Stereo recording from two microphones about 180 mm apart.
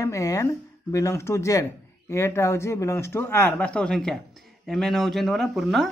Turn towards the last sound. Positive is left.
turn(degrees=0)  # may be behind; listen again after turning